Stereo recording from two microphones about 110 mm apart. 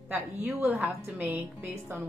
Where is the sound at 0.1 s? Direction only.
15° right (ahead or behind).